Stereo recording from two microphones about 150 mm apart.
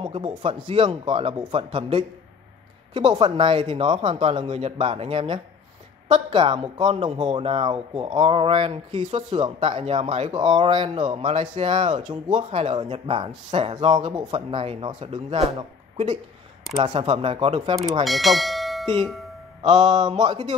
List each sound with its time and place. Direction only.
0.0 s speech: 35° right (ahead or behind)
12.7 s speech: 30° right (ahead or behind)
15.0 s speech: 45° right (ahead or behind)
16.7 s speech: 40° right (ahead or behind)
18.0 s speech: centre (ahead or behind)
19.8 s speech: 30° right (ahead or behind)